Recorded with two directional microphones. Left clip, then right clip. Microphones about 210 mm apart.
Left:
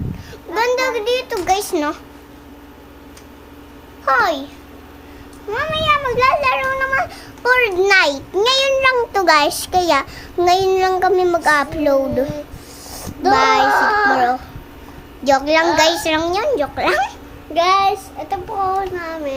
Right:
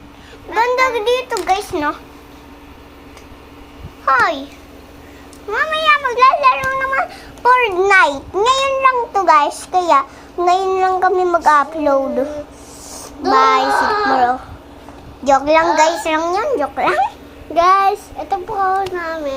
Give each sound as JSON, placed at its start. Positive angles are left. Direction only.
{"t": 0.5, "sound": "a sound", "side_deg": 5}
{"t": 0.9, "sound": "a child's voice", "side_deg": -5}
{"t": 1.5, "sound": "child singing", "side_deg": 20}
{"t": 4.2, "sound": "speech", "side_deg": 10}
{"t": 5.5, "sound": "speech", "side_deg": 15}
{"t": 6.1, "sound": "child singing", "side_deg": 0}
{"t": 8.3, "sound": "speech", "side_deg": 15}
{"t": 8.7, "sound": "child singing", "side_deg": 20}
{"t": 13.3, "sound": "speech", "side_deg": 10}
{"t": 13.8, "sound": "child singing", "side_deg": 30}
{"t": 14.1, "sound": "speech", "side_deg": 10}
{"t": 15.3, "sound": "child singing", "side_deg": 5}
{"t": 16.0, "sound": "speech", "side_deg": 5}
{"t": 17.5, "sound": "child singing", "side_deg": -5}